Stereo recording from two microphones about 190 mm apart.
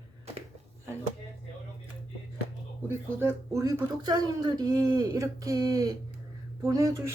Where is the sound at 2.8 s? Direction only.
15° right (ahead or behind).